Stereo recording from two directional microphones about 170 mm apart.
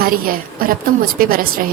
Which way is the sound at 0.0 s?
60° right (ahead or behind).